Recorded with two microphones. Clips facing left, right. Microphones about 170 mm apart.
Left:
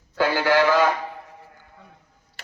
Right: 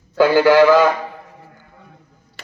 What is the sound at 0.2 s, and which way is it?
Speech, 90° right.